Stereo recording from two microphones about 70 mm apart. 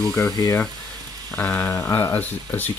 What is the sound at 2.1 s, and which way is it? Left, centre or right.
Frying, left.